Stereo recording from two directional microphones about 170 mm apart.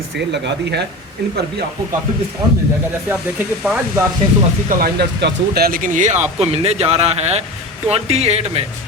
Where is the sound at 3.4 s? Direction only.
5° right (ahead or behind).